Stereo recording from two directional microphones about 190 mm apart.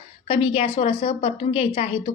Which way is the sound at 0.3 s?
30° left (ahead or behind).